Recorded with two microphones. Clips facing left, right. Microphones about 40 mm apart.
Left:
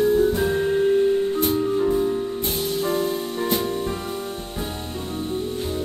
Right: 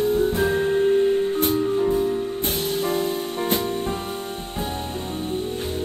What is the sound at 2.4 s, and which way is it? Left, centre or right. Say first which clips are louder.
Music: even; right.